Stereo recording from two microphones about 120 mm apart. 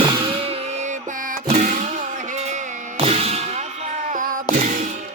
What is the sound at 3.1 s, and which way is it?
Music, 55° right (ahead or behind).